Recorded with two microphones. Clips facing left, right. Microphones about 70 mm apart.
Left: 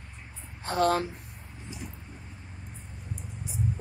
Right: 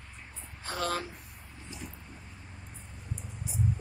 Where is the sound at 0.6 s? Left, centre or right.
Left.